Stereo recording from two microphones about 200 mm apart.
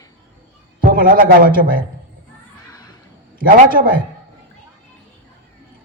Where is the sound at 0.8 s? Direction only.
45° right (ahead or behind).